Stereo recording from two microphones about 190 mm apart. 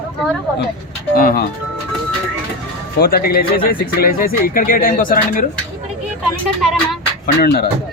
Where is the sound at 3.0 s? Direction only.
50° left (ahead or behind).